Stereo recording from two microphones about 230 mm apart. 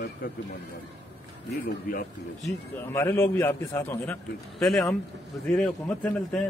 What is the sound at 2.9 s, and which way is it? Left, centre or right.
A man's voice, centre.